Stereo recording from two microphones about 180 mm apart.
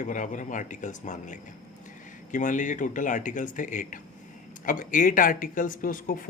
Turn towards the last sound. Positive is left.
turn(degrees=50)  # may be behind; listen again after turning